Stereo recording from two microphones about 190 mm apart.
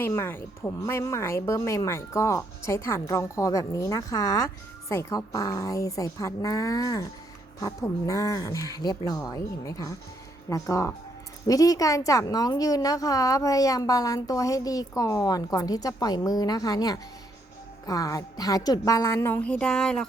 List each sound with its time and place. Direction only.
0.0 s a woman's voice: 10° left (ahead or behind)